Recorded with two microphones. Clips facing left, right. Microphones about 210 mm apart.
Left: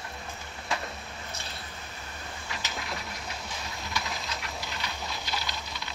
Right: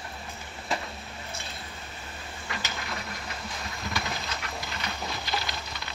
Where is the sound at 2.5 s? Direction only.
Centre (ahead or behind).